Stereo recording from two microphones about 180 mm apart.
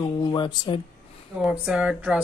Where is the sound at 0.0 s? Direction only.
25° left (ahead or behind).